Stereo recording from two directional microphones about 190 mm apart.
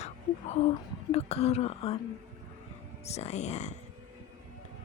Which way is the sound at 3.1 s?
35° left (ahead or behind).